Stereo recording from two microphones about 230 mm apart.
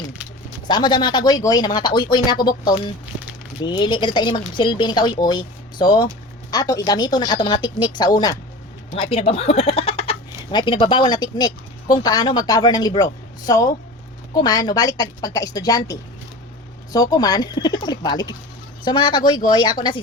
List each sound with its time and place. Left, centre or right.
0.7 s speech: centre
2.7 s a sound: centre
3.6 s speech: centre